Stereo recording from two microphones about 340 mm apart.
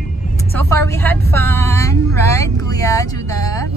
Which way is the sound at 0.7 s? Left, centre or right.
Centre.